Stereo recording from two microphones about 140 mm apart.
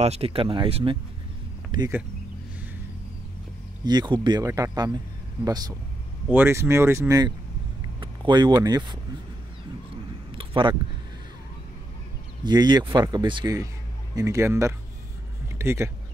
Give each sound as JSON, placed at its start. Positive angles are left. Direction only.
{"t": 0.0, "sound": "speech", "side_deg": -45}
{"t": 3.8, "sound": "speech", "side_deg": -30}
{"t": 4.5, "sound": "speech", "side_deg": -20}
{"t": 6.2, "sound": "speech", "side_deg": -15}
{"t": 10.3, "sound": "a sound", "side_deg": -35}
{"t": 12.4, "sound": "speech", "side_deg": -30}
{"t": 14.1, "sound": "speech", "side_deg": -20}